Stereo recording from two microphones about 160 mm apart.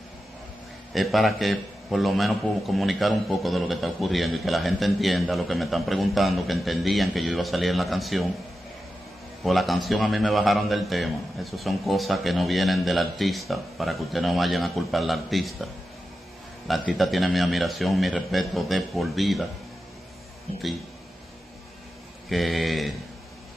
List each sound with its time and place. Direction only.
0.9 s a man's voice: centre (ahead or behind)
9.4 s a man's voice: centre (ahead or behind)
22.3 s a man's voice: centre (ahead or behind)